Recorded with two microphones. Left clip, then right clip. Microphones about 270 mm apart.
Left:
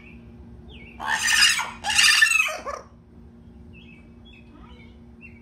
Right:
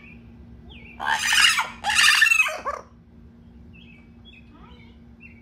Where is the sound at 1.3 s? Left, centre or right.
Centre.